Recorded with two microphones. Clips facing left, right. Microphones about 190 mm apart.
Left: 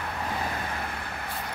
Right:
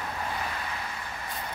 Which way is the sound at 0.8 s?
60° left (ahead or behind).